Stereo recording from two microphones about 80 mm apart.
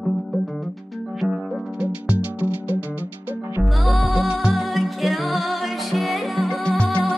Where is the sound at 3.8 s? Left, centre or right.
Centre.